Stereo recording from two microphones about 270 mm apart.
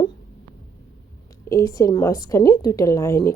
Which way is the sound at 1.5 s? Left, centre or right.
Centre.